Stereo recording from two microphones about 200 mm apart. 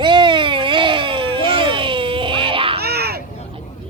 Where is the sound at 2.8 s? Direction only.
50° right (ahead or behind).